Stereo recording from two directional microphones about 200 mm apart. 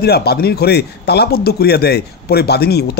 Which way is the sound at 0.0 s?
55° left (ahead or behind).